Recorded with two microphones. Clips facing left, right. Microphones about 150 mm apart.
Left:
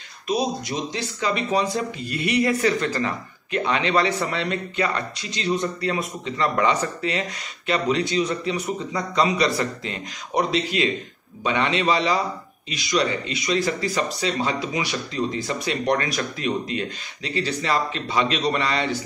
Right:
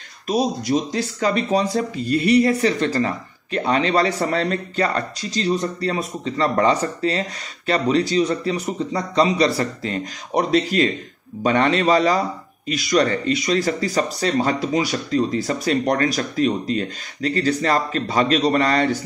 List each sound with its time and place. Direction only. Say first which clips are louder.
0.3 s a man's voice: right 5 dB; 40° right (ahead or behind)